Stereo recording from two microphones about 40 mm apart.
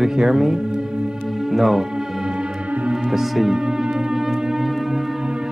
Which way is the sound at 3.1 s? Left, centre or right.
Centre.